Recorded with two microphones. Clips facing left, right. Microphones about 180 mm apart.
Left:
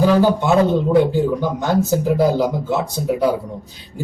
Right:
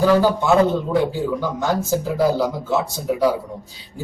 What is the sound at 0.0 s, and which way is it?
A man's voice, 15° left (ahead or behind).